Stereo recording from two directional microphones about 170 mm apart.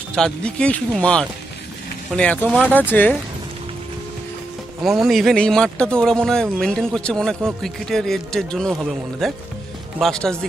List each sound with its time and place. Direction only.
0.1 s speech: 5° left (ahead or behind)
5.0 s speech: centre (ahead or behind)